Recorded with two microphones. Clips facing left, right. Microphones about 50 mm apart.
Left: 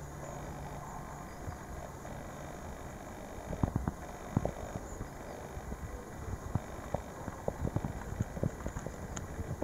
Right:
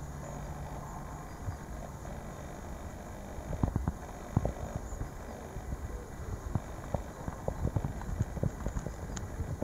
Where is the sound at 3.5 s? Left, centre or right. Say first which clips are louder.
Even; left.